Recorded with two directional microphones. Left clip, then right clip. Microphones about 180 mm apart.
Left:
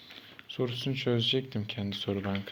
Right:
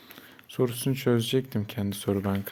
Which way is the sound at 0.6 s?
50° right (ahead or behind).